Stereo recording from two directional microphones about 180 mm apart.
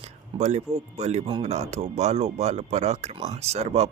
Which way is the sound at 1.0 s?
40° right (ahead or behind).